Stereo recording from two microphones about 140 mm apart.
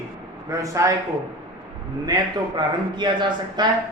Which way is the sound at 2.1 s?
30° right (ahead or behind).